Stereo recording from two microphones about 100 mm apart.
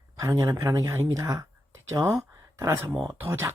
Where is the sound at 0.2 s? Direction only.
30° right (ahead or behind).